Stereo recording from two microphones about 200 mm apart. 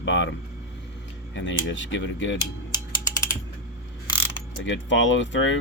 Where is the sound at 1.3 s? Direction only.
65° left (ahead or behind).